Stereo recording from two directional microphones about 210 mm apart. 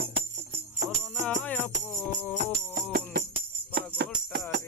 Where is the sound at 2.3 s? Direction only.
45° right (ahead or behind).